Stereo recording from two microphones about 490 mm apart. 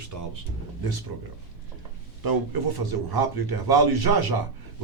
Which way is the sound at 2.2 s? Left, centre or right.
Right.